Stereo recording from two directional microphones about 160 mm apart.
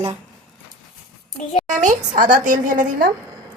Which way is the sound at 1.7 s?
55° right (ahead or behind).